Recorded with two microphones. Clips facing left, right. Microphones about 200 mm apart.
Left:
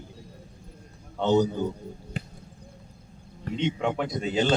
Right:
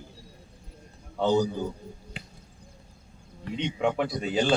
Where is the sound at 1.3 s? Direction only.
20° left (ahead or behind).